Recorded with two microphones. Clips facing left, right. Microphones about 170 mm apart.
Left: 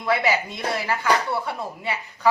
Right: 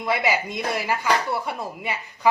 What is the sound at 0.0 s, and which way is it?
A woman's voice, 15° right (ahead or behind).